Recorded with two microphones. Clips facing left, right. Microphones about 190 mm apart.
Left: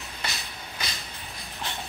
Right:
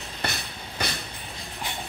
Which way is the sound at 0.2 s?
60° right (ahead or behind).